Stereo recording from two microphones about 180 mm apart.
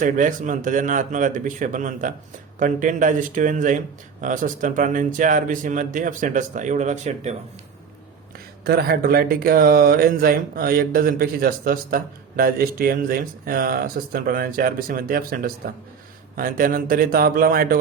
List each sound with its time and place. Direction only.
0.0 s speech: 45° right (ahead or behind)
8.6 s speech: 60° right (ahead or behind)